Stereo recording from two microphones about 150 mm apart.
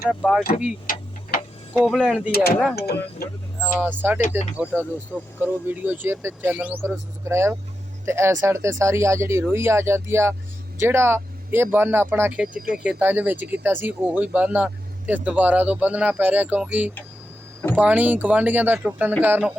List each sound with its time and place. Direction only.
0.1 s speech: centre (ahead or behind)
0.9 s tick-tock: 70° left (ahead or behind)
1.8 s speech: centre (ahead or behind)
2.3 s speech: 90° left
3.6 s speech: 10° right (ahead or behind)